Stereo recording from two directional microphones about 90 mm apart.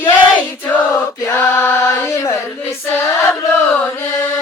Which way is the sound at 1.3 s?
25° left (ahead or behind).